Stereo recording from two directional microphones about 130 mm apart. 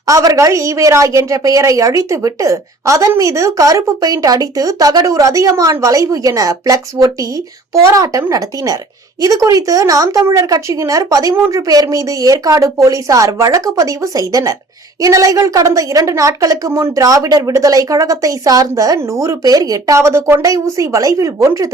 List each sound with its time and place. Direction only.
0.0 s a woman's voice: 25° right (ahead or behind)